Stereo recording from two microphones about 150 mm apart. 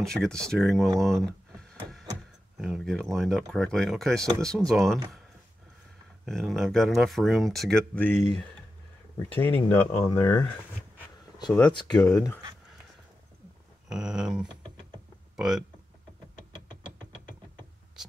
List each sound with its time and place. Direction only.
0.0 s speech: 5° left (ahead or behind)
0.9 s a sound: centre (ahead or behind)
2.5 s speech: 5° right (ahead or behind)
6.2 s speech: centre (ahead or behind)
9.3 s speech: 10° left (ahead or behind)
12.0 s speech: 20° left (ahead or behind)
13.8 s speech: 5° right (ahead or behind)